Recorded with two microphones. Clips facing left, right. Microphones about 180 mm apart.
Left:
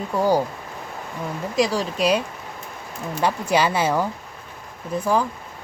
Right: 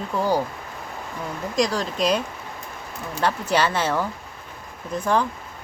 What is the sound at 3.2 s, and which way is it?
Speech, 10° left (ahead or behind).